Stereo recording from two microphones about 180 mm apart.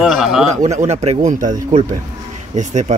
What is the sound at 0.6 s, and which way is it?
Speech, 40° right (ahead or behind).